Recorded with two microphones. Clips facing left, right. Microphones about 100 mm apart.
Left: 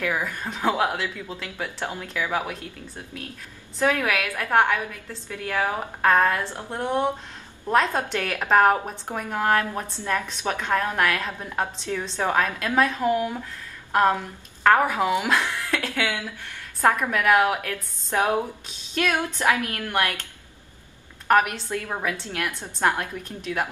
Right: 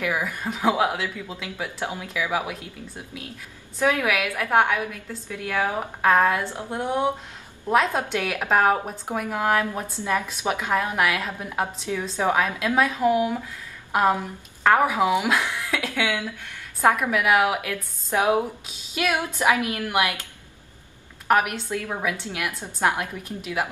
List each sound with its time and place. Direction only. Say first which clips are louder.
0.0 s a woman's voice: right 1 dB; 10° right (ahead or behind)
3.8 s a woman's voice: right 1 dB; 5° right (ahead or behind)
21.3 s a woman's voice: left 1 dB; 5° right (ahead or behind)